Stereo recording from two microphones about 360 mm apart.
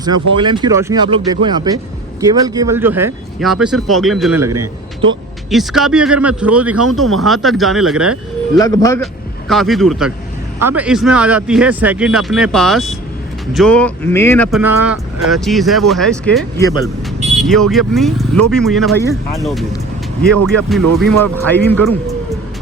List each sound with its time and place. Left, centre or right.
0.0 s speech: centre
5.5 s speech: centre
8.5 s speech: centre